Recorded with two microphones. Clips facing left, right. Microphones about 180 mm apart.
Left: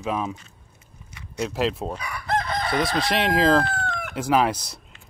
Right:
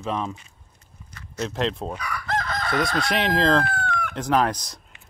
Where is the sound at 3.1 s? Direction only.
5° left (ahead or behind).